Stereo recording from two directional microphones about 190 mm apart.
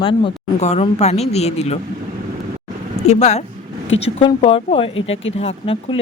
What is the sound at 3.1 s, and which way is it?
Speech, 35° left (ahead or behind).